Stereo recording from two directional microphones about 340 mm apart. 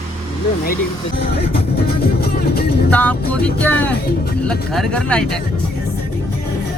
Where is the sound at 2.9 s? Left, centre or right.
Centre.